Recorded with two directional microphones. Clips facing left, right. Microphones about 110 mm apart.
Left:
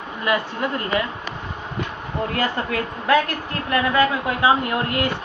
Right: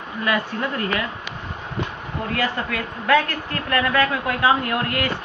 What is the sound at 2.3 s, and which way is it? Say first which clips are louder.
A man's voice: even; 25° left (ahead or behind).